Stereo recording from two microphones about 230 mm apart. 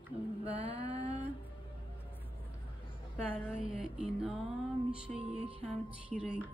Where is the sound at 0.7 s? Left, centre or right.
Right.